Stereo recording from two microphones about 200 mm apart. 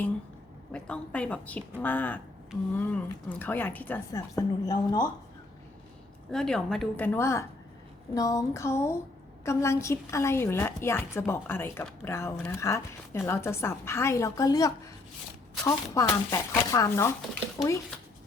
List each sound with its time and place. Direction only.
0.7 s a woman's voice: 5° left (ahead or behind)
6.3 s a woman's voice: 5° left (ahead or behind)